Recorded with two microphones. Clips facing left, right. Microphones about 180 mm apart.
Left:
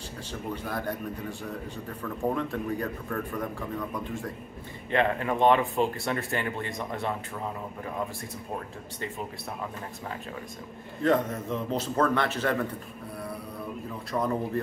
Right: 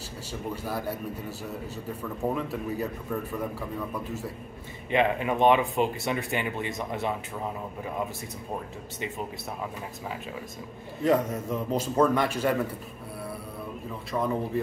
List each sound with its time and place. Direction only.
0.3 s a man's voice: 10° right (ahead or behind)
2.3 s a man's voice: 5° right (ahead or behind)
4.9 s a man's voice: 15° right (ahead or behind)
11.0 s a man's voice: 10° right (ahead or behind)
14.1 s speech: centre (ahead or behind)